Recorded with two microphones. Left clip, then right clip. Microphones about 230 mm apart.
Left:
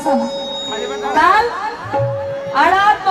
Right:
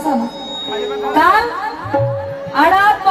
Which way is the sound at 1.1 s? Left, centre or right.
Right.